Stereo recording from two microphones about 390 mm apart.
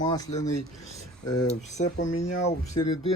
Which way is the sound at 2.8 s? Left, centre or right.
Centre.